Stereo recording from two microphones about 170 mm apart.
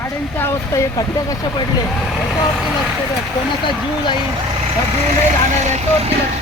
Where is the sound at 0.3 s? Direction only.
15° left (ahead or behind).